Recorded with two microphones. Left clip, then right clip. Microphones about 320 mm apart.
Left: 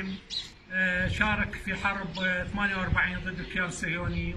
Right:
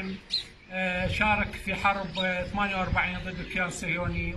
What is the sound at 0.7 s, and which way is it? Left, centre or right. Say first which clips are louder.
A man's voice: left 1 dB; centre.